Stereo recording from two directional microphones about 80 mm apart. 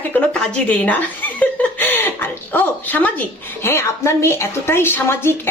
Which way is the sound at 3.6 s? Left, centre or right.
Left.